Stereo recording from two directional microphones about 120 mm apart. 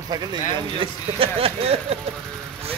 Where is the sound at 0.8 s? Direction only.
50° right (ahead or behind).